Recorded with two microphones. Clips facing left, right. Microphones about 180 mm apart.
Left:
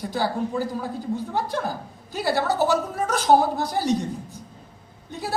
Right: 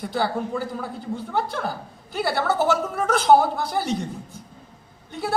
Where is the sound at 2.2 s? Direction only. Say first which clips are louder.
Even; 55° right (ahead or behind).